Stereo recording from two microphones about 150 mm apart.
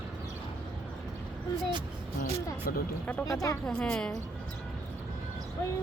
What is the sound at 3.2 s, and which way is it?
Speech, 20° left (ahead or behind).